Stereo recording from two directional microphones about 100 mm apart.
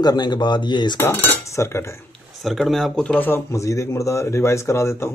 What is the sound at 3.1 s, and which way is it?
Speech, 20° left (ahead or behind).